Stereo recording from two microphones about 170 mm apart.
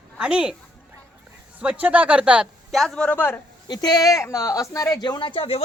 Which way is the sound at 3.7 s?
25° left (ahead or behind).